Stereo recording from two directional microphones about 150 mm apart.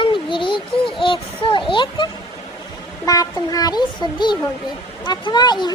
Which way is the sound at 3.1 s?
25° left (ahead or behind).